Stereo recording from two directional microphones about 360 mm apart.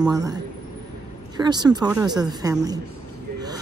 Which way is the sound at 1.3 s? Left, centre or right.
Centre.